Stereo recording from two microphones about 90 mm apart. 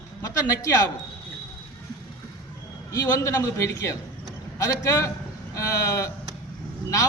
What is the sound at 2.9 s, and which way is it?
A man's voice, 35° left (ahead or behind).